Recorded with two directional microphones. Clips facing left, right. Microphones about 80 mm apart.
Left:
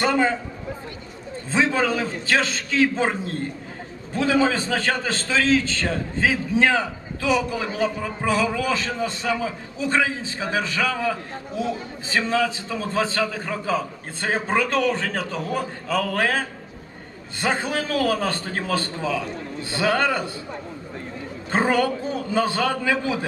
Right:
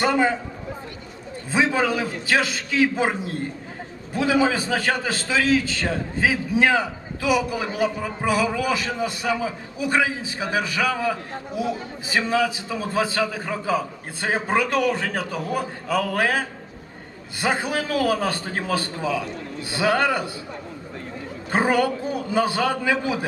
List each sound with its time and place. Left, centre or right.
0.0 s a man's voice: centre
1.5 s a man's voice: centre
21.5 s a man's voice: centre